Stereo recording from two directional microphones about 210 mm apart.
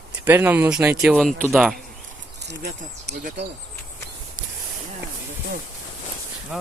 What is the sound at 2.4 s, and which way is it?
Speech, 55° right (ahead or behind).